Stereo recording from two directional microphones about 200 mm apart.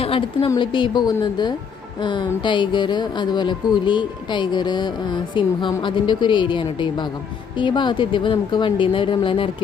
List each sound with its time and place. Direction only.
0.0 s speech: 25° left (ahead or behind)